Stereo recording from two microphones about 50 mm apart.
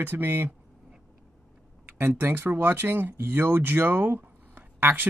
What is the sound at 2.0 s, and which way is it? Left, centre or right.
Speech, right.